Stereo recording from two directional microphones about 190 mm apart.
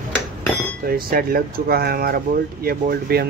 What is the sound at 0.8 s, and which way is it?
Speech, 50° right (ahead or behind).